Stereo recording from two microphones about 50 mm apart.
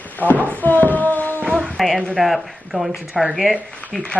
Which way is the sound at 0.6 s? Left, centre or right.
Left.